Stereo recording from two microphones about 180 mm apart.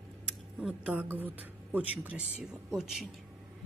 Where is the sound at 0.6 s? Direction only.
5° right (ahead or behind).